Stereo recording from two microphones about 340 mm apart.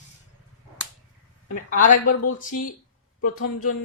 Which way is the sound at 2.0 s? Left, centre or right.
Left.